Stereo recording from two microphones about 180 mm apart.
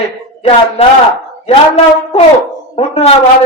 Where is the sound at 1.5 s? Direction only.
35° left (ahead or behind).